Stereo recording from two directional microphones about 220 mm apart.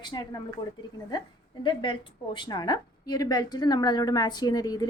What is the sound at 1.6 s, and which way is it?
A woman's voice, 20° left (ahead or behind).